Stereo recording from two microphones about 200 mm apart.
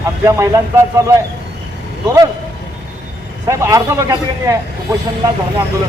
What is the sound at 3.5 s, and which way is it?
A man's voice, 15° right (ahead or behind).